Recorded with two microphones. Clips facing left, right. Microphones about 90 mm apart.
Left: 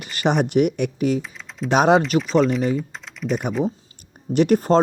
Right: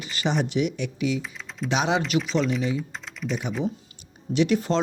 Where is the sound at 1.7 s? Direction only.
45° left (ahead or behind).